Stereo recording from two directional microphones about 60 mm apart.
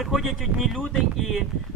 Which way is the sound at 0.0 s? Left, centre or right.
Centre.